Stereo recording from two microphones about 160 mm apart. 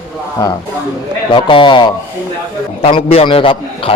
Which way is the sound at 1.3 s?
30° left (ahead or behind).